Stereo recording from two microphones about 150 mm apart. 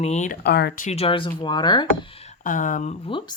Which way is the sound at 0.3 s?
90° left.